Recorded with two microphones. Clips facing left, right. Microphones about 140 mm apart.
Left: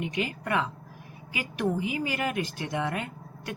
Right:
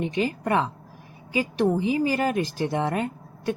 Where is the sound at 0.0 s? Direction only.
35° right (ahead or behind).